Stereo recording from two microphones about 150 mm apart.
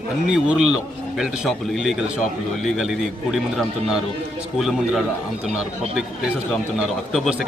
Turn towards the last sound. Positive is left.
turn(degrees=-5)  # may be behind; listen again after turning